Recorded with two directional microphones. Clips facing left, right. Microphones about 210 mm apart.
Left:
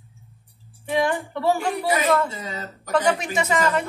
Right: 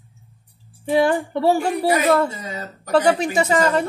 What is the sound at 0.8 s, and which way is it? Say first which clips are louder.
Speech: right 5 dB; 35° right (ahead or behind).